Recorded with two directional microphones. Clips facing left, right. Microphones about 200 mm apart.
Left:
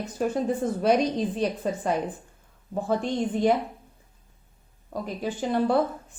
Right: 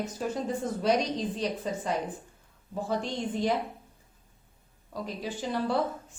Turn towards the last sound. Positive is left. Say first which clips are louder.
# left 6 dB
turn(degrees=55)  # may be behind; listen again after turning